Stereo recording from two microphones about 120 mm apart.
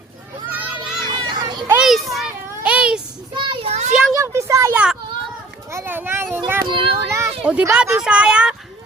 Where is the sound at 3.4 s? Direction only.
60° right (ahead or behind).